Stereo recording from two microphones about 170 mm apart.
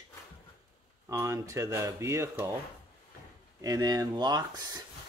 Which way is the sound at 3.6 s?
20° right (ahead or behind).